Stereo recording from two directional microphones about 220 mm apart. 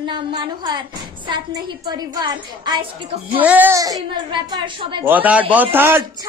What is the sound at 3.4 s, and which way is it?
A woman's voice, 10° right (ahead or behind).